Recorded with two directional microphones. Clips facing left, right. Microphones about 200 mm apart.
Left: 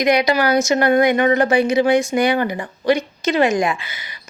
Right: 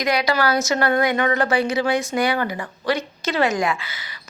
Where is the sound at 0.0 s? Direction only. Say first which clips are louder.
Left 4 dB; 20° left (ahead or behind).